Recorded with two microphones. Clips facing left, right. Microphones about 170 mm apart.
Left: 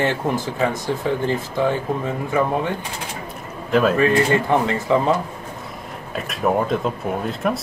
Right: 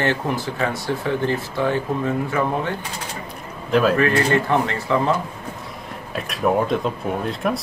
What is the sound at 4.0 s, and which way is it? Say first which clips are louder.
Speech: left 1 dB; 15° left (ahead or behind).